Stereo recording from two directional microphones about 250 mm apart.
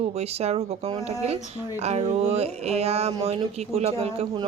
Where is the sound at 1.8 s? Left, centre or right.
Right.